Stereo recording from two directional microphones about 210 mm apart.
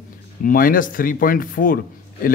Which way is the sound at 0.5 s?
40° left (ahead or behind).